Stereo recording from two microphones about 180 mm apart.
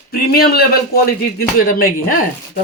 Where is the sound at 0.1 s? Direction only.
60° left (ahead or behind).